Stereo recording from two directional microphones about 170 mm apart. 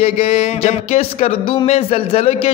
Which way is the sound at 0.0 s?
40° left (ahead or behind).